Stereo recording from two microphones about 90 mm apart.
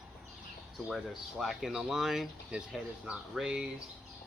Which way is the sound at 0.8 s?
5° right (ahead or behind).